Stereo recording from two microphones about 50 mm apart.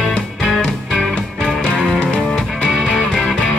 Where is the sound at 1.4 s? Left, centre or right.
Centre.